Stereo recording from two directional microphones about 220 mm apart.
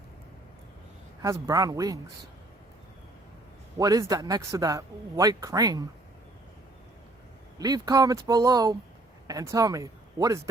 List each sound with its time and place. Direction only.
1.2 s a man's voice: 15° right (ahead or behind)
3.8 s a man's voice: 15° right (ahead or behind)
7.6 s a man's voice: 15° right (ahead or behind)